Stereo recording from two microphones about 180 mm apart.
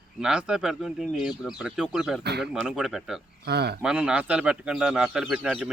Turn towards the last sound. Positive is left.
turn(degrees=-5)  # may be behind; listen again after turning